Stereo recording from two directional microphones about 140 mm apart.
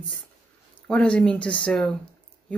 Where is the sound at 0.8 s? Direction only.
10° left (ahead or behind).